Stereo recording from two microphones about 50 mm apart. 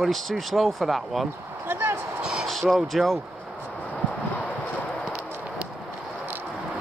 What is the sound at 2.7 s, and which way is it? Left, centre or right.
Speech, centre.